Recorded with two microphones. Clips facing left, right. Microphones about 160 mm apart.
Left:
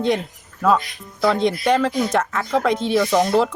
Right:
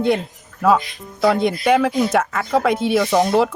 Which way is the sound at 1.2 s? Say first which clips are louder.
Right 2 dB; 10° right (ahead or behind).